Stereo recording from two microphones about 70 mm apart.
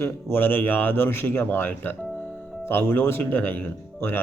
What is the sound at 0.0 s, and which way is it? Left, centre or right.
A man's voice, left.